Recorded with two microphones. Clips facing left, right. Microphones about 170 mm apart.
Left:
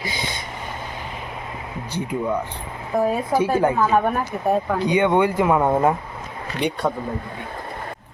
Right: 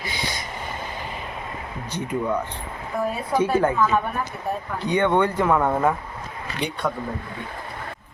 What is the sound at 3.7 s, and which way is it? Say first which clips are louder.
Speech: left 3 dB; 35° left (ahead or behind).